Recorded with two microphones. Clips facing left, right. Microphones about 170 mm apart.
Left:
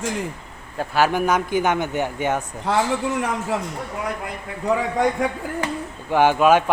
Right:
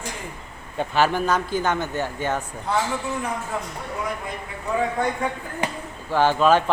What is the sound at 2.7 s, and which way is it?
Speech, 90° left.